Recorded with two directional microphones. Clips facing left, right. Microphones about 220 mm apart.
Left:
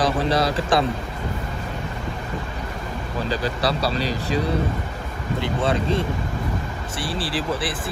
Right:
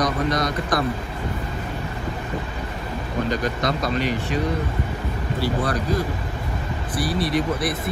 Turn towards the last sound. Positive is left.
turn(degrees=30)  # may be behind; listen again after turning